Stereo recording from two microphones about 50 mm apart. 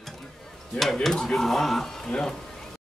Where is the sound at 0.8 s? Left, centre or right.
Centre.